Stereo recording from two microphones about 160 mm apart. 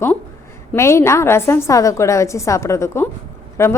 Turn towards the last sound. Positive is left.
turn(degrees=15)  # may be behind; listen again after turning